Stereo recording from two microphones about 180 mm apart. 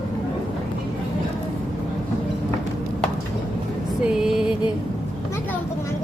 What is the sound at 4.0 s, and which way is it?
Music, 5° right (ahead or behind).